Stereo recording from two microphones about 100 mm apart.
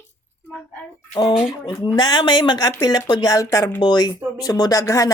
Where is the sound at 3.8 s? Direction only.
50° left (ahead or behind).